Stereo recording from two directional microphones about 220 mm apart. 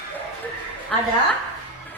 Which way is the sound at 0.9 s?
5° left (ahead or behind).